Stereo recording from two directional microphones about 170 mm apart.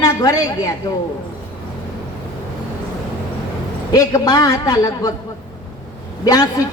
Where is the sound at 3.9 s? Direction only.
20° left (ahead or behind).